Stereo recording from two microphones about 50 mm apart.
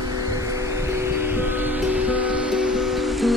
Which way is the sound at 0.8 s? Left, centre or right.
Right.